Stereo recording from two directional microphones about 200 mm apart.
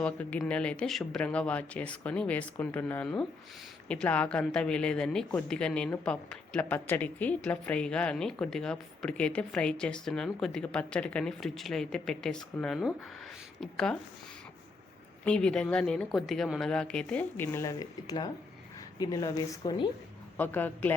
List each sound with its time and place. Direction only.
0.0 s speech: 5° left (ahead or behind)
15.2 s a woman's voice: 5° left (ahead or behind)